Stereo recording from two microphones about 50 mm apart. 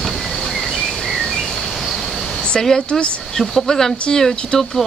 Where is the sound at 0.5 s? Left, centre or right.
Centre.